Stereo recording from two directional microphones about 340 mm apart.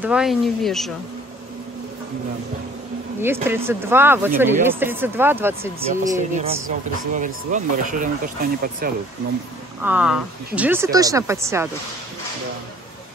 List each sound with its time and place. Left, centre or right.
0.0 s speech: centre
3.4 s speech: centre
6.1 s speech: right
9.8 s speech: centre